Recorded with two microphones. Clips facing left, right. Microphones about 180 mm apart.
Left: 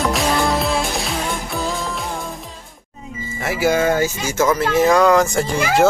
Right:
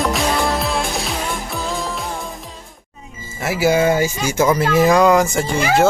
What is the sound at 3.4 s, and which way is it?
Speech, 5° right (ahead or behind).